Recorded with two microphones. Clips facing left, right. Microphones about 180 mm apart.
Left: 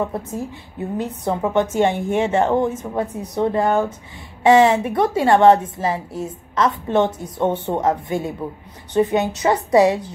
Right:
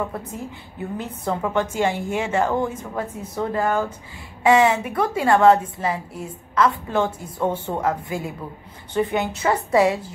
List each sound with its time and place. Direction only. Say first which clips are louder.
0.7 s a woman's voice: left 5 dB; 20° left (ahead or behind)